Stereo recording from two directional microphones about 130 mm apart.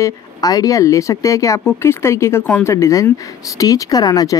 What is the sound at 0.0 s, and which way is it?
Speech, 30° left (ahead or behind).